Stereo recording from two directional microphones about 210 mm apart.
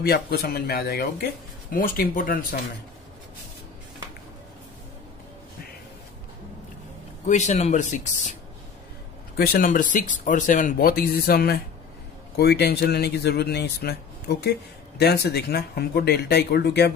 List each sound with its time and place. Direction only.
0.0 s speech: 45° left (ahead or behind)
7.2 s speech: 35° left (ahead or behind)
9.4 s speech: 45° left (ahead or behind)